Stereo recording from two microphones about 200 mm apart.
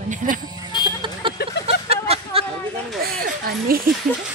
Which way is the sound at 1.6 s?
30° right (ahead or behind).